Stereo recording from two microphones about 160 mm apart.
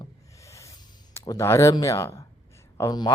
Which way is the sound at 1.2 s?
20° left (ahead or behind).